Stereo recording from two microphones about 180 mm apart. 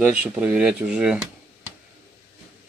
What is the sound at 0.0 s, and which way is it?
Speech, 10° right (ahead or behind).